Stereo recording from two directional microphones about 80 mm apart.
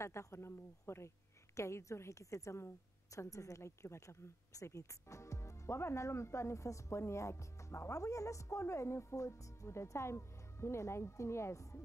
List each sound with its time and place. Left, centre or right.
0.0 s speech: left